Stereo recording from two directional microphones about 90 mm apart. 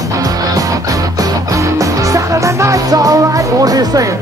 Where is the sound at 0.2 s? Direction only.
40° right (ahead or behind).